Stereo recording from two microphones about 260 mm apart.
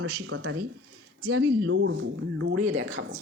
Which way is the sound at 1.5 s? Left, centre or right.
Right.